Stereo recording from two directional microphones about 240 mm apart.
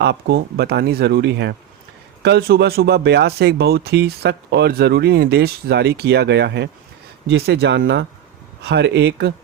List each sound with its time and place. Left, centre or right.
0.0 s speech: right